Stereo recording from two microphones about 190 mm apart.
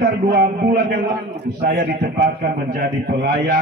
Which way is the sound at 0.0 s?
55° right (ahead or behind).